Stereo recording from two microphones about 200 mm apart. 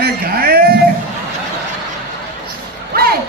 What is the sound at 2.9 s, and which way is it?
Music, 50° right (ahead or behind).